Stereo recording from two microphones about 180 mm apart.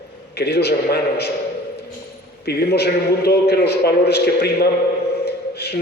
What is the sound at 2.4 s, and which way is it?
A man's voice, 65° left (ahead or behind).